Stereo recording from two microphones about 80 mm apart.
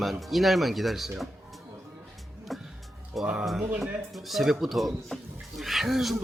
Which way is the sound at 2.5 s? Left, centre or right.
Centre.